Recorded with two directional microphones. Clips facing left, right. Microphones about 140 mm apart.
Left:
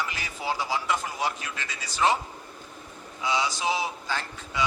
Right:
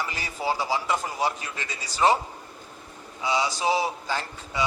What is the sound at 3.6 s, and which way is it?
Speech, 40° right (ahead or behind).